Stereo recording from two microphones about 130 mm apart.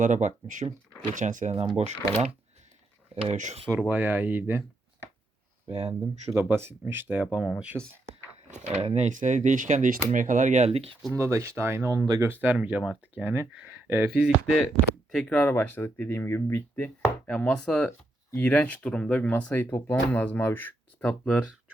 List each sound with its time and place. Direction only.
0.0 s speech: 70° right (ahead or behind)
1.1 s speech: 85° right
1.7 s speech: 55° right (ahead or behind)
3.3 s speech: 70° right (ahead or behind)
3.8 s speech: 15° right (ahead or behind)
5.6 s speech: 50° right (ahead or behind)
5.9 s speech: 15° right (ahead or behind)
7.7 s speech: 5° left (ahead or behind)
8.4 s speech: 65° right (ahead or behind)
11.1 s speech: 20° right (ahead or behind)
12.3 s speech: 15° right (ahead or behind)
15.1 s speech: 10° left (ahead or behind)
17.0 s speech: 10° left (ahead or behind)